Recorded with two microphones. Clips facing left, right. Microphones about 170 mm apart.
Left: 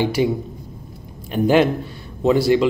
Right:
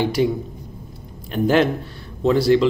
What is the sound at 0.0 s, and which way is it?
Speech, 5° left (ahead or behind).